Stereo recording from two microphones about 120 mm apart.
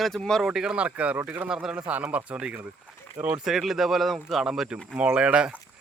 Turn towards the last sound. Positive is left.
turn(degrees=-10)  # may be behind; listen again after turning